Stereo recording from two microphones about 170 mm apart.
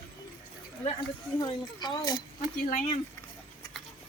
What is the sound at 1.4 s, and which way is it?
Speech, 25° left (ahead or behind).